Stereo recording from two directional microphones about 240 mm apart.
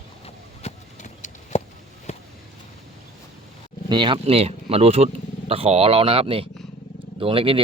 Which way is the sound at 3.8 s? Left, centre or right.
Centre.